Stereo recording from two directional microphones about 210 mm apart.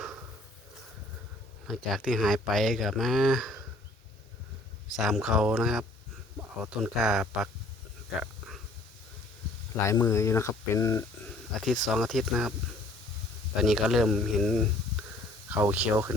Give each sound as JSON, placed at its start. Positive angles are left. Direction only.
{"t": 1.6, "sound": "speech", "side_deg": 0}
{"t": 4.9, "sound": "speech", "side_deg": 0}
{"t": 9.8, "sound": "speech", "side_deg": 15}
{"t": 11.3, "sound": "a sound", "side_deg": 0}
{"t": 11.9, "sound": "speech", "side_deg": 0}
{"t": 13.6, "sound": "speech", "side_deg": 0}